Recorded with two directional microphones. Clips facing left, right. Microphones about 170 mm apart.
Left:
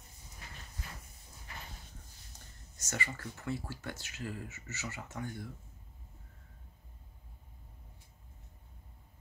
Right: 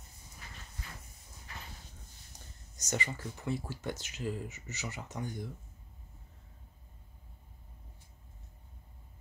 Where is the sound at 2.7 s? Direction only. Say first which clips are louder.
Right 3 dB; 20° right (ahead or behind).